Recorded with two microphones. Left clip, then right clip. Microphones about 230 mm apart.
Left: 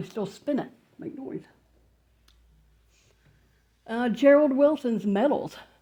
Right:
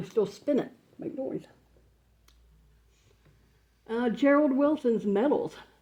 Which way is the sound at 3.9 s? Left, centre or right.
Left.